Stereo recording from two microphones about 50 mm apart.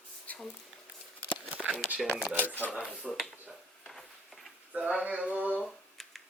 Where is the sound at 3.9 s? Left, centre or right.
Centre.